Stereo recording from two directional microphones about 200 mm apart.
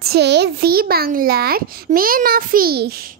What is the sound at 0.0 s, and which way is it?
Speech, 55° right (ahead or behind).